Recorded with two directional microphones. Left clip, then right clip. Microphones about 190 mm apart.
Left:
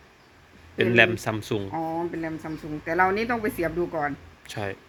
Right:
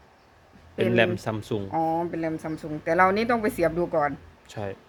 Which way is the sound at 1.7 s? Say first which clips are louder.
Right 8 dB; 40° right (ahead or behind).